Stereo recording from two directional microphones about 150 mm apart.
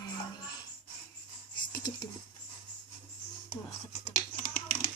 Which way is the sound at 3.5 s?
45° left (ahead or behind).